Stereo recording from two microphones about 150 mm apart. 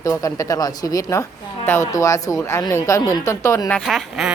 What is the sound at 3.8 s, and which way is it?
Speech, centre (ahead or behind).